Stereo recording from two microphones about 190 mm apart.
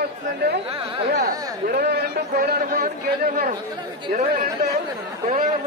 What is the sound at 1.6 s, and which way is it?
A man's voice, 55° right (ahead or behind).